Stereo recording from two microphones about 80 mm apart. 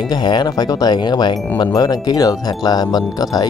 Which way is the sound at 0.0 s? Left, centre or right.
Left.